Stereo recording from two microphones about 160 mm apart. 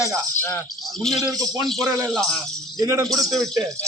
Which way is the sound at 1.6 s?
Centre (ahead or behind).